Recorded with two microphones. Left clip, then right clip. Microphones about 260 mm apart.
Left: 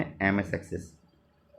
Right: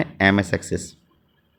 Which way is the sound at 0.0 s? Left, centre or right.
Right.